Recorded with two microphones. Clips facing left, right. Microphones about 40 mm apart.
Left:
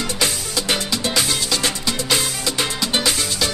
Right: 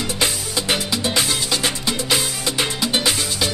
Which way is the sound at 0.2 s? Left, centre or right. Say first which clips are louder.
Right 1 dB; centre.